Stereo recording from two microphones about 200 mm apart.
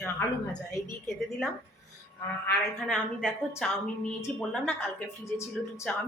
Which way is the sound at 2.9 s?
Centre (ahead or behind).